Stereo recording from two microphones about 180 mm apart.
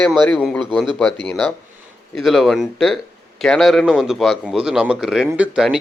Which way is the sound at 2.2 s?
Centre (ahead or behind).